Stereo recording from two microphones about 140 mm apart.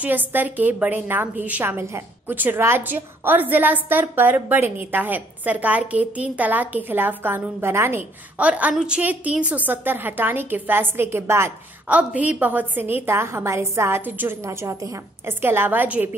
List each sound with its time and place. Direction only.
0.0 s a woman's voice: 15° right (ahead or behind)